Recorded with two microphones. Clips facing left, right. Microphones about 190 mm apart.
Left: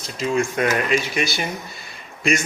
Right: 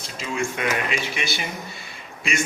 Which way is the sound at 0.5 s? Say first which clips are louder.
Left 5 dB; 40° left (ahead or behind).